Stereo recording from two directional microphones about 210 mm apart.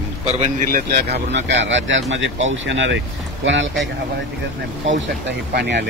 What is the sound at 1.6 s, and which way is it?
Speech, 60° right (ahead or behind).